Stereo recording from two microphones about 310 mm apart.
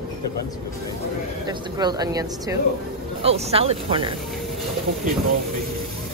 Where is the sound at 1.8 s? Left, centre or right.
Centre.